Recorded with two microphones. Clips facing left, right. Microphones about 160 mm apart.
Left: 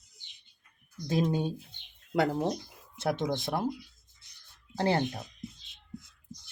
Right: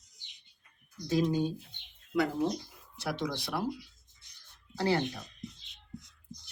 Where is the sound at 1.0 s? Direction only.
55° left (ahead or behind).